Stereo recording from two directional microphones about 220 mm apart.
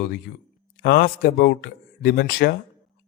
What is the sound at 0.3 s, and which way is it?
A man's voice, 45° left (ahead or behind).